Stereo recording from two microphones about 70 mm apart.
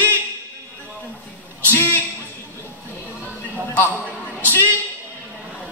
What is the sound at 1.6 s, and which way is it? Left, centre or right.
Speech, left.